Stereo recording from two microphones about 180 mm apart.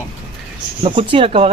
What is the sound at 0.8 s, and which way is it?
Speech, 30° right (ahead or behind).